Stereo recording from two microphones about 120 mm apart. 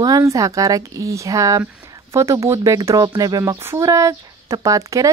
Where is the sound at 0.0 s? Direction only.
30° right (ahead or behind).